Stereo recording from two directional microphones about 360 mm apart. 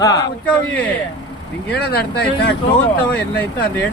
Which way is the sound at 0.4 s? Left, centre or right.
Centre.